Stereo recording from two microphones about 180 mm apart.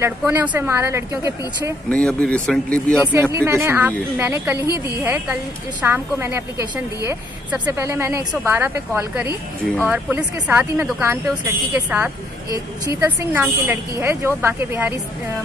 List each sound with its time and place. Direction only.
0.2 s speech: 10° right (ahead or behind)
1.9 s speech: 5° left (ahead or behind)
3.1 s speech: 15° right (ahead or behind)
4.6 s a woman's voice: 20° left (ahead or behind)
5.0 s speech: 15° right (ahead or behind)